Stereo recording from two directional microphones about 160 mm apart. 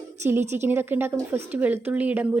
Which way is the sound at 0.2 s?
15° right (ahead or behind).